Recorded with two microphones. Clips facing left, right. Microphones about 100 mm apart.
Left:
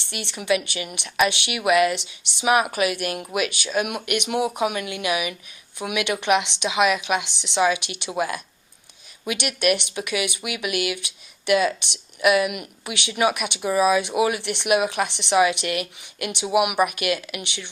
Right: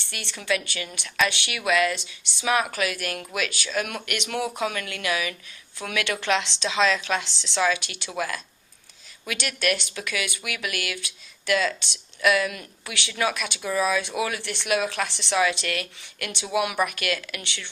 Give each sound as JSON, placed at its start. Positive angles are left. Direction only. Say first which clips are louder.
{"t": 0.0, "sound": "a woman's voice", "louder": "left 5 dB", "side_deg": 20}